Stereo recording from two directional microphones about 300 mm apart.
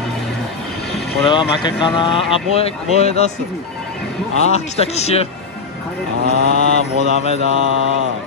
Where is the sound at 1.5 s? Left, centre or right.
Centre.